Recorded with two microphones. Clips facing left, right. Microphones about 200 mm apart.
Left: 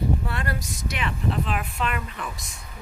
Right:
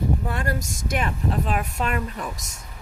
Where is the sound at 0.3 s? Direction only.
45° right (ahead or behind).